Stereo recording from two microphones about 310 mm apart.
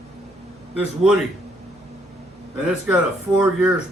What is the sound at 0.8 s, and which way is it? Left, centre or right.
Speech, centre.